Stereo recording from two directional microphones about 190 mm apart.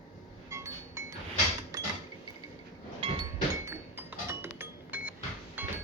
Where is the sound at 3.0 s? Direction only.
30° right (ahead or behind).